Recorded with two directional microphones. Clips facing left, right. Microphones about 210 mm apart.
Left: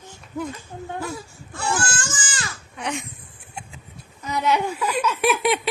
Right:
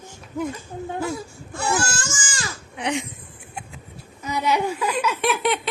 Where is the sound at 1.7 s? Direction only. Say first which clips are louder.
Right 1 dB; 10° right (ahead or behind).